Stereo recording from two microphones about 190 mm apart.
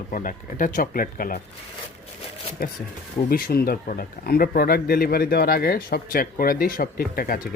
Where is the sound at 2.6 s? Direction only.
50° left (ahead or behind).